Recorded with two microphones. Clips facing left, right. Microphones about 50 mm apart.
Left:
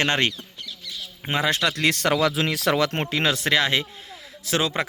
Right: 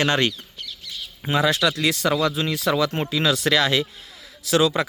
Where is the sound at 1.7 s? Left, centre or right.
Left.